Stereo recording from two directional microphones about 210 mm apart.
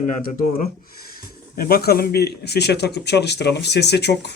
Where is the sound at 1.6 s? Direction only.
45° left (ahead or behind).